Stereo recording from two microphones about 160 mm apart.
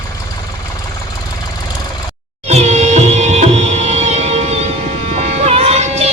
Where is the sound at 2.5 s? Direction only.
45° right (ahead or behind).